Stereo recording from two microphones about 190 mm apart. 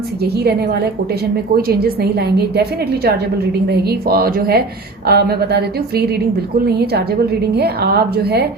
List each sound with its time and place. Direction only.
1.6 s a woman's voice: 55° right (ahead or behind)
7.5 s a woman's voice: 55° right (ahead or behind)